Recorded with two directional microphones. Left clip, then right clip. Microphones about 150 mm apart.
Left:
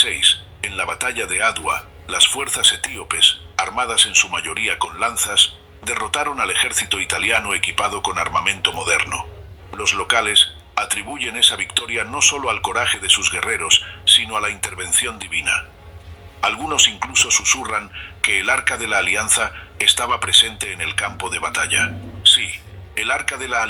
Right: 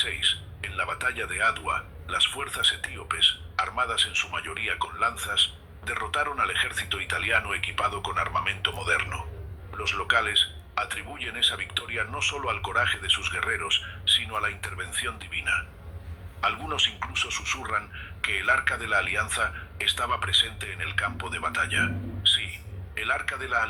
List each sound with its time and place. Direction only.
0.0 s speech: 35° left (ahead or behind)